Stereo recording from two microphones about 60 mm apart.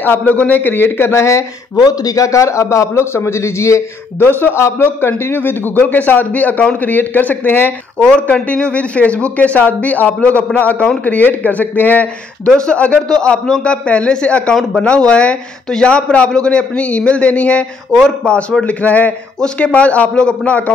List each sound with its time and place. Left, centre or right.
0.0 s a man's voice: left
1.1 s speech: left
1.8 s a man's voice: left
4.4 s a man's voice: left
8.0 s a man's voice: centre
12.4 s a man's voice: centre